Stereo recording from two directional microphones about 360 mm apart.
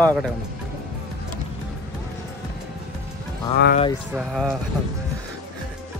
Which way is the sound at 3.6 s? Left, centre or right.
Left.